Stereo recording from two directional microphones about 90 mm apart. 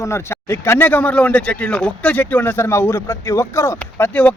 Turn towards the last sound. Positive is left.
turn(degrees=15)  # may be behind; listen again after turning